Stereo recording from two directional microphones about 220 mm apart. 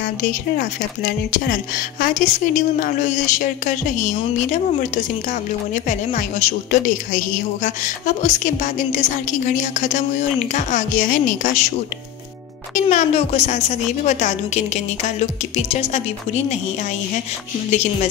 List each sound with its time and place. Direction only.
0.2 s speech: 40° left (ahead or behind)
12.7 s speech: 35° left (ahead or behind)